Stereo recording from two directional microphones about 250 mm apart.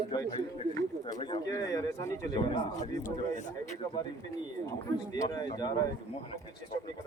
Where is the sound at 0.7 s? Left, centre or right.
Centre.